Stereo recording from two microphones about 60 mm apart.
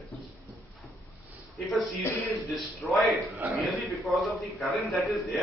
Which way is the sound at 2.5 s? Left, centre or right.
Centre.